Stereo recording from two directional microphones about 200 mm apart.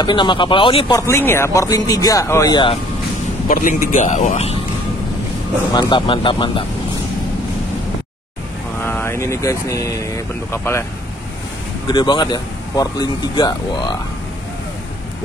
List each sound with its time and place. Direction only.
0.0 s speech: 25° left (ahead or behind)
3.4 s a man's voice: 40° left (ahead or behind)
5.7 s speech: 20° left (ahead or behind)
8.8 s speech: 10° left (ahead or behind)
11.9 s speech: 20° left (ahead or behind)